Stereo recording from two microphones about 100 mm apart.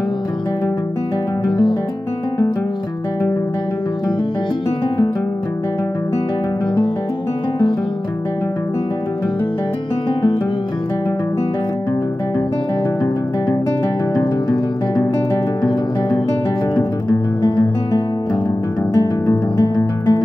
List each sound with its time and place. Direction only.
17.4 s music: 40° left (ahead or behind)